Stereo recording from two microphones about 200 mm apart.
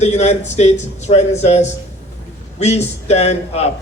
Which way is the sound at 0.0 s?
35° left (ahead or behind).